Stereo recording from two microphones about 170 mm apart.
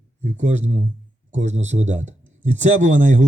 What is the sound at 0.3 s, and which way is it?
Speech, 45° right (ahead or behind).